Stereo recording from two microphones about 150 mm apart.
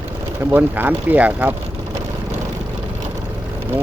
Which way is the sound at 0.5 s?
10° right (ahead or behind).